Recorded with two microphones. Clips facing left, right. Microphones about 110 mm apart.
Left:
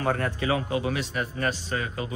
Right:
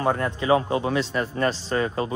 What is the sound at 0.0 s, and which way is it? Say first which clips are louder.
Speech: right 3 dB; 30° right (ahead or behind).